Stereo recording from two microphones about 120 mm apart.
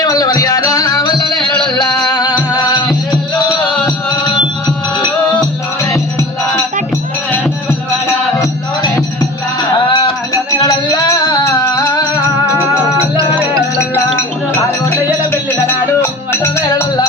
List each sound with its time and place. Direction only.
0.0 s music: 30° left (ahead or behind)
9.9 s music: 30° left (ahead or behind)
15.3 s music: 20° left (ahead or behind)